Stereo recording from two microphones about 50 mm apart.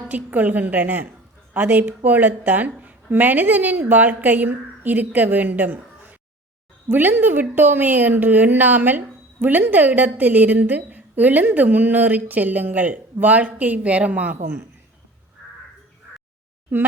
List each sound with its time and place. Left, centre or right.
0.1 s a woman's voice: right